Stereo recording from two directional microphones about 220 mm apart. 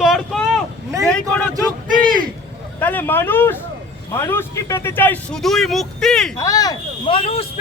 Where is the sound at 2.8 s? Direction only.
10° left (ahead or behind).